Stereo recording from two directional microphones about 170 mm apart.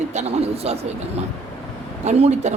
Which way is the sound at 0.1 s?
40° right (ahead or behind).